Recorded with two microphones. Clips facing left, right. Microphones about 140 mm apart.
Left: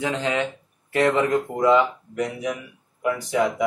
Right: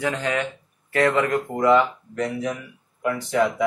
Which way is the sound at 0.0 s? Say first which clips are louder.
Even; 20° left (ahead or behind).